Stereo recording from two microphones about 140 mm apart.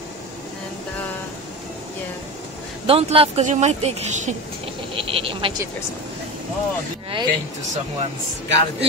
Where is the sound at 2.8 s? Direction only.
40° right (ahead or behind).